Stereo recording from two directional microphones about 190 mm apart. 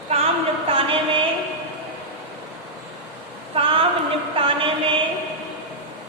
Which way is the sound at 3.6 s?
30° right (ahead or behind).